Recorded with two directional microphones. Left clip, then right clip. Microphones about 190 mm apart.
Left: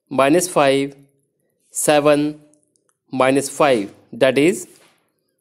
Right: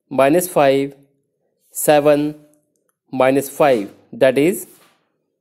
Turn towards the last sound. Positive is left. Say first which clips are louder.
# right 1 dB
turn(degrees=-10)  # may be behind; listen again after turning